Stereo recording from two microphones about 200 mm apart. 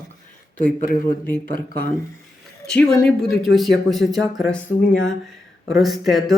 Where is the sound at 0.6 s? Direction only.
40° left (ahead or behind).